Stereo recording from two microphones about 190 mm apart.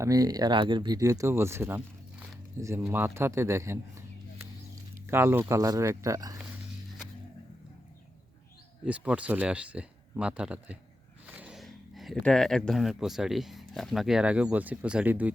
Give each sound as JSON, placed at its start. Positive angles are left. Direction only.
{"t": 0.0, "sound": "speech", "side_deg": -20}
{"t": 8.8, "sound": "speech", "side_deg": -5}